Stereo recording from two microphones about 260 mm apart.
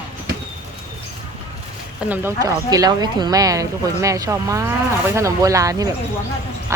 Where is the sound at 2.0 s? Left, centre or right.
Centre.